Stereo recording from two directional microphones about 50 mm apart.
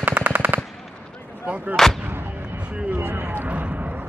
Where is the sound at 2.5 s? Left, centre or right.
Right.